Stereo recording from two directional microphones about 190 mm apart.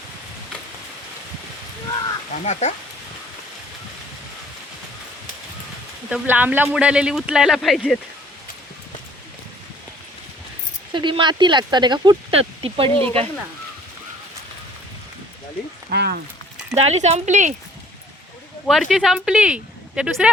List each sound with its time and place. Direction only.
2.4 s speech: 35° left (ahead or behind)
6.1 s speech: 5° right (ahead or behind)
10.9 s speech: 25° right (ahead or behind)
15.9 s speech: 55° right (ahead or behind)
16.7 s speech: 35° right (ahead or behind)
18.6 s speech: centre (ahead or behind)